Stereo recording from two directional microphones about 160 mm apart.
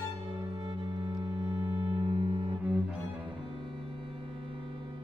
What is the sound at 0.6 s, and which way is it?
Music, 30° right (ahead or behind).